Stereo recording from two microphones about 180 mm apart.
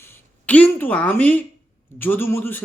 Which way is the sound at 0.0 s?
15° left (ahead or behind).